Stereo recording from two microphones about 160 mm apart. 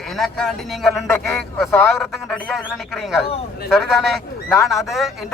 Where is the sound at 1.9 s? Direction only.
5° left (ahead or behind).